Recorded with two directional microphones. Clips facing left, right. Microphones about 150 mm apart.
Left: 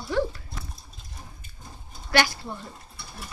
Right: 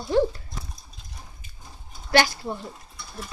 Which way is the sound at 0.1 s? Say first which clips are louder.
Right 5 dB; 25° right (ahead or behind).